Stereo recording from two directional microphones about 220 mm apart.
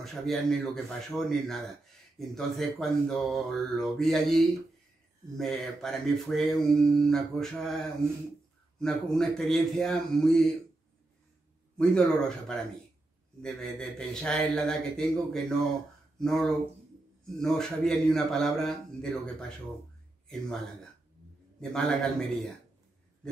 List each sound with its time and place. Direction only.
0.0 s speech: centre (ahead or behind)
11.7 s speech: 5° left (ahead or behind)